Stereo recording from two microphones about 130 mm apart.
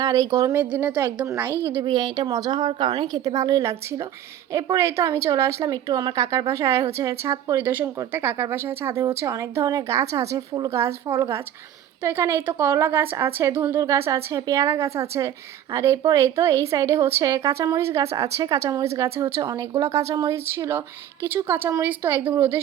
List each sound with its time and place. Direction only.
0.0 s a woman's voice: 25° right (ahead or behind)
0.6 s a woman's voice: 15° right (ahead or behind)
1.8 s a woman's voice: 35° right (ahead or behind); by 22.6 s 20° right (ahead or behind)